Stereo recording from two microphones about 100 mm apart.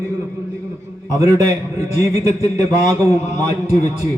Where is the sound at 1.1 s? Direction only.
35° right (ahead or behind).